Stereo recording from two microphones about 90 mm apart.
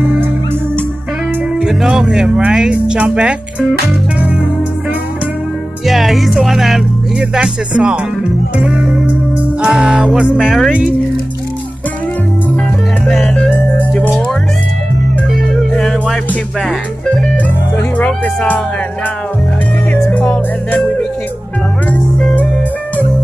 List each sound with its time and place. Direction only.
1.6 s speech: 5° right (ahead or behind)
5.9 s speech: centre (ahead or behind)
8.5 s music: 10° right (ahead or behind)
10.7 s speech: 10° right (ahead or behind)
13.0 s music: 5° left (ahead or behind)
15.7 s music: 5° left (ahead or behind)
17.9 s speech: 15° left (ahead or behind)
19.9 s music: 20° left (ahead or behind)